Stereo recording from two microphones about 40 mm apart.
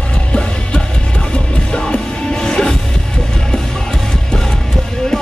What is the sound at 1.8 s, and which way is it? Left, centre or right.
Music, centre.